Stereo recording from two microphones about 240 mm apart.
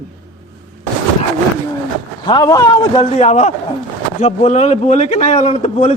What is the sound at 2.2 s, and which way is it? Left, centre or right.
Speech, centre.